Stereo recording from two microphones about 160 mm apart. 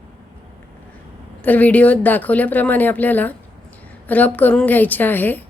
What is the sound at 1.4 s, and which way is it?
A woman's voice, 10° left (ahead or behind).